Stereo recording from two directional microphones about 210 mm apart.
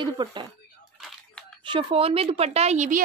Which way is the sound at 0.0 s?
20° right (ahead or behind).